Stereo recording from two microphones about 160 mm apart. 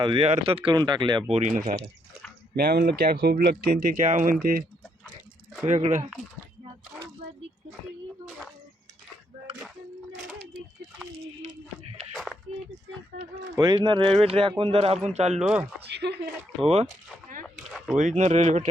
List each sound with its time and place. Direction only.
0.0 s speech: 35° right (ahead or behind)
1.3 s speech: 50° right (ahead or behind)
2.6 s speech: 80° right; by 4.6 s 60° right (ahead or behind)
5.6 s speech: 50° right (ahead or behind)
12.1 s a sound: centre (ahead or behind)
13.6 s speech: 30° right (ahead or behind)
15.4 s speech: 5° right (ahead or behind)
15.9 s speech: 90° right
17.4 s a sound: centre (ahead or behind)
17.9 s speech: 50° right (ahead or behind)